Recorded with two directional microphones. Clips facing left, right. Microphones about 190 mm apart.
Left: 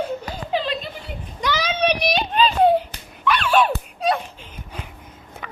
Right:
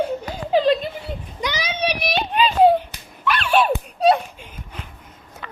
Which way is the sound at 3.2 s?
10° right (ahead or behind).